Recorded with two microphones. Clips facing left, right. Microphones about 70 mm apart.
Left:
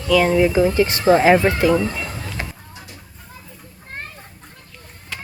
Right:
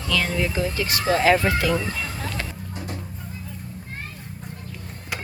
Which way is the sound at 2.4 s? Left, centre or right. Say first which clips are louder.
Left 2 dB; centre.